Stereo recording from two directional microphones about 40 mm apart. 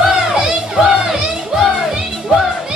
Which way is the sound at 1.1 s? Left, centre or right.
Centre.